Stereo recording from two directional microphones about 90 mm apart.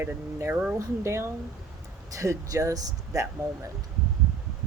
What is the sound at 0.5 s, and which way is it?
Speech, 15° right (ahead or behind).